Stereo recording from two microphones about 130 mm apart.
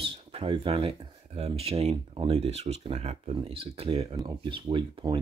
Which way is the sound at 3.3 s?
45° right (ahead or behind).